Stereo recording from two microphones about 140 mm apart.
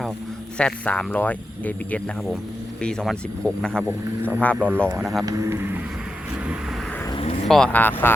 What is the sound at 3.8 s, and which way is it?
Speech, 15° right (ahead or behind).